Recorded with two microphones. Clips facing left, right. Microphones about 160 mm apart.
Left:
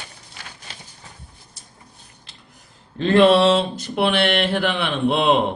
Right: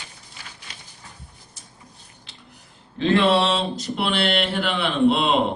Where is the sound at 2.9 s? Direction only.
55° left (ahead or behind).